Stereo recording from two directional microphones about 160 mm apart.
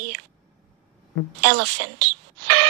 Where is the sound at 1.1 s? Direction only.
90° right.